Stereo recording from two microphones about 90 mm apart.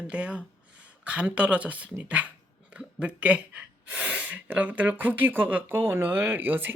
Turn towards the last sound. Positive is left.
turn(degrees=-25)  # may be behind; listen again after turning